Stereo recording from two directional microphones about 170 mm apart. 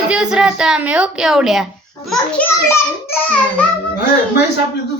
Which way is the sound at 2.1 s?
10° left (ahead or behind).